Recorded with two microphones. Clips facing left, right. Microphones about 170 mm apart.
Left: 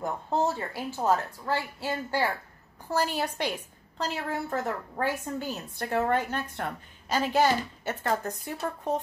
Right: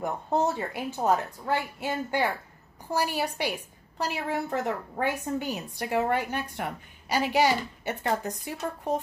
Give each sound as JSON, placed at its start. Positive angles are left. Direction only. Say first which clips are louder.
{"t": 0.0, "sound": "a woman's voice", "louder": "right 1 dB", "side_deg": -20}